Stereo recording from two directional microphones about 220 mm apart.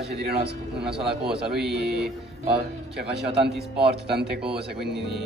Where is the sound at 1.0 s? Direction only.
Centre (ahead or behind).